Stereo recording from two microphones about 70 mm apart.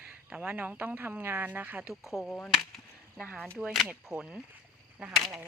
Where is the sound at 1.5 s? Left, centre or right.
Right.